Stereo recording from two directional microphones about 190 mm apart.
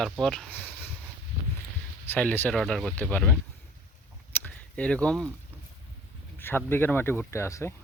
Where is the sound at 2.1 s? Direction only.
10° left (ahead or behind).